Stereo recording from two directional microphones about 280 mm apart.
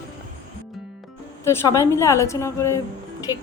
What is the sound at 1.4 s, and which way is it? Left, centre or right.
A woman's voice, centre.